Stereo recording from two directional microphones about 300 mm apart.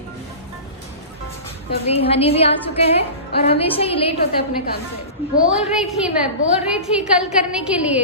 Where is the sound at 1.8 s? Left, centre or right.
Centre.